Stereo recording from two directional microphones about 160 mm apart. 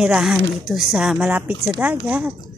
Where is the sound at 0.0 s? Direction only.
5° right (ahead or behind).